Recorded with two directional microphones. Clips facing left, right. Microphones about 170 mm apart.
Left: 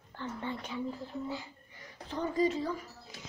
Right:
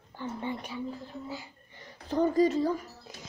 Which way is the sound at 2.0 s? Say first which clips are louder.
Right 6 dB; 40° right (ahead or behind).